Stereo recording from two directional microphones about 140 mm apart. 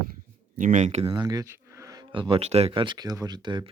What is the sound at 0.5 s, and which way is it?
Speech, 65° right (ahead or behind).